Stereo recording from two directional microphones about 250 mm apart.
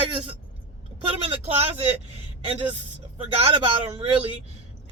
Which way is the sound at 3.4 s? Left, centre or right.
Right.